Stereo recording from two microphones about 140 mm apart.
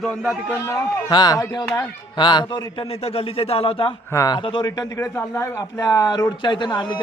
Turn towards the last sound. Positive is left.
turn(degrees=30)  # may be behind; listen again after turning